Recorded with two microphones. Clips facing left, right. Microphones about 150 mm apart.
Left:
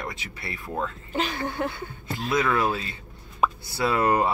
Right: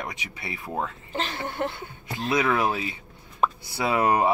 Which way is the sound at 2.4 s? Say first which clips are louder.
Even; 15° right (ahead or behind).